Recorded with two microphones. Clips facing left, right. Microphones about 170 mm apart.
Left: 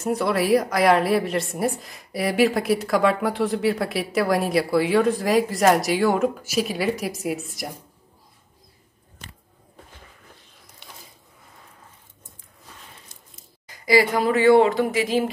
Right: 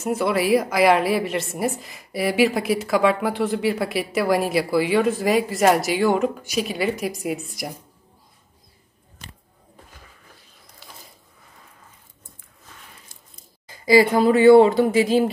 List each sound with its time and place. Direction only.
0.0 s a woman's voice: centre (ahead or behind)
13.7 s speech: 25° right (ahead or behind)